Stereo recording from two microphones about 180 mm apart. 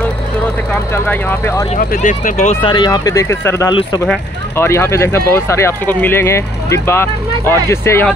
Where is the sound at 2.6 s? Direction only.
25° left (ahead or behind).